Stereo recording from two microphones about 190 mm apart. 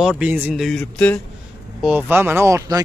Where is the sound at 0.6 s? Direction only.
5° left (ahead or behind).